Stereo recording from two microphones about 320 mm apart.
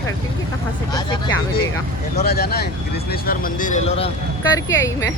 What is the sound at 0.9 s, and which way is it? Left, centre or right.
Speech, centre.